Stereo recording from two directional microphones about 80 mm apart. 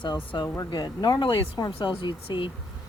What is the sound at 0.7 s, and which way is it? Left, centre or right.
Speech, left.